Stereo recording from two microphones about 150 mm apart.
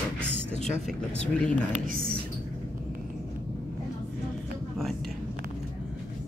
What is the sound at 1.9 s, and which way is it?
Speech, 70° right (ahead or behind).